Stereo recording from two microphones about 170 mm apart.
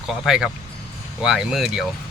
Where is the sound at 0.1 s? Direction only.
Centre (ahead or behind).